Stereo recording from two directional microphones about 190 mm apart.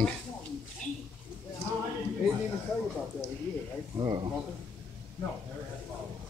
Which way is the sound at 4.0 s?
25° right (ahead or behind).